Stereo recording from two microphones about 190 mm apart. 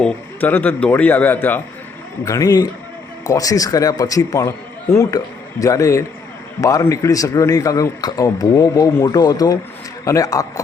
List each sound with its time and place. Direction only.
0.4 s speech: 10° left (ahead or behind)